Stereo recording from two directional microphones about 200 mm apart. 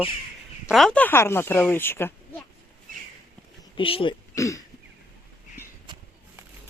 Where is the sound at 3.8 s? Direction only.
25° left (ahead or behind).